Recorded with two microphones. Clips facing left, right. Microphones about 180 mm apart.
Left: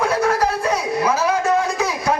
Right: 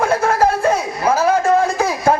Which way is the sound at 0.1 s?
25° right (ahead or behind).